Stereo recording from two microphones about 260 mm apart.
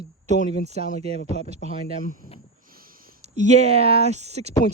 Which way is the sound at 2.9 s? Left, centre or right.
Right.